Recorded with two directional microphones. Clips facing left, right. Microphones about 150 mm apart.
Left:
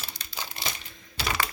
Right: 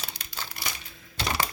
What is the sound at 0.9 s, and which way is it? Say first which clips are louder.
Crack: right 1 dB; centre (ahead or behind).